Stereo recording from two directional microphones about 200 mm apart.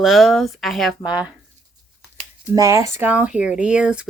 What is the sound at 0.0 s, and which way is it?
Speech, centre (ahead or behind).